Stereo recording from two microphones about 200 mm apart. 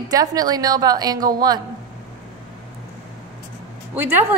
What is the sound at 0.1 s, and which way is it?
A woman's voice, 20° right (ahead or behind).